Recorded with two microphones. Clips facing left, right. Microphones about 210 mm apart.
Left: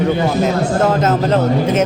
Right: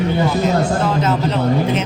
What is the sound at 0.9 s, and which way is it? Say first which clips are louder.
Speech: left 3 dB; 45° left (ahead or behind).